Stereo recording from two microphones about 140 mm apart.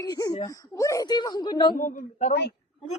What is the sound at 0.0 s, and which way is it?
Speech, 25° left (ahead or behind).